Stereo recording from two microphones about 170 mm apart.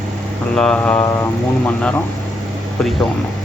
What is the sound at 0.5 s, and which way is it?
Speech, 5° left (ahead or behind).